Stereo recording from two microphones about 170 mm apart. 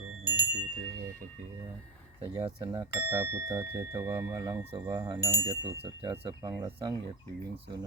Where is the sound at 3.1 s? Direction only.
15° right (ahead or behind).